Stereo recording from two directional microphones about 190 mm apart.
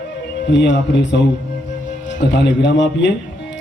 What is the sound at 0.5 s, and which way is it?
Speech, 65° left (ahead or behind).